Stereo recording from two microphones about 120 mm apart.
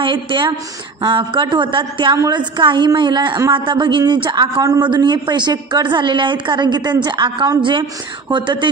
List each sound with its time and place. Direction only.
0.0 s a man's voice: 40° right (ahead or behind)